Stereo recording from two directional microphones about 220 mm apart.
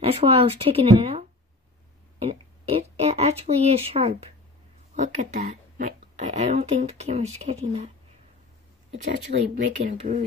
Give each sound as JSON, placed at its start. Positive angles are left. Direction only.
{"t": 0.0, "sound": "speech", "side_deg": -25}
{"t": 2.1, "sound": "a sound", "side_deg": -25}
{"t": 4.9, "sound": "speech", "side_deg": -30}
{"t": 9.3, "sound": "speech", "side_deg": -40}